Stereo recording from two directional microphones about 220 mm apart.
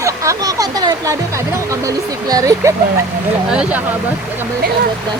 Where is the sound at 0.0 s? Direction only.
15° right (ahead or behind).